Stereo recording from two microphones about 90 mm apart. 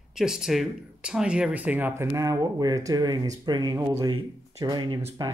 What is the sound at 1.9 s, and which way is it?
Speech, 30° right (ahead or behind).